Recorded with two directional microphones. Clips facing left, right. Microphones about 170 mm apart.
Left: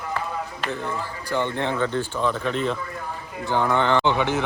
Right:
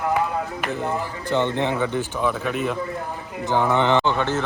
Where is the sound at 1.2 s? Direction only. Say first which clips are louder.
Right 3 dB; 20° right (ahead or behind).